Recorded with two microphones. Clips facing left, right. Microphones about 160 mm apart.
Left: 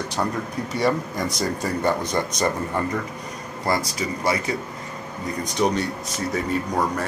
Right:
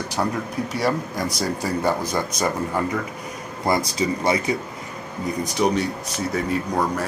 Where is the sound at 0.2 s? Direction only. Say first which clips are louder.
Right 2 dB; 5° right (ahead or behind).